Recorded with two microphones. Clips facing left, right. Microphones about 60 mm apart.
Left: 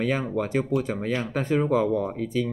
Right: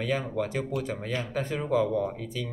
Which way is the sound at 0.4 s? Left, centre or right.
Left.